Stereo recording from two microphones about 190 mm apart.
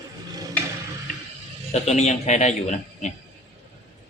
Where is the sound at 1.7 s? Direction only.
35° left (ahead or behind).